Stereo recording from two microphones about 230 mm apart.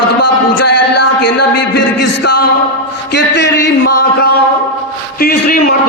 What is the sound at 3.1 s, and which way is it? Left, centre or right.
A man's voice, left.